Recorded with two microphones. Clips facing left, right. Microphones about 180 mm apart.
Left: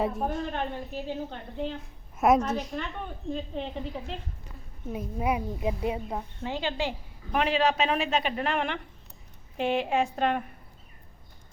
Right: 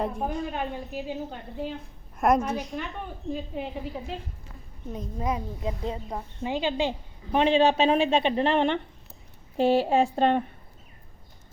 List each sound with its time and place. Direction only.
0.0 s a woman's voice: centre (ahead or behind)
2.1 s a woman's voice: centre (ahead or behind)
4.9 s a woman's voice: 10° left (ahead or behind)
6.4 s a woman's voice: 15° right (ahead or behind); by 10.4 s 30° right (ahead or behind)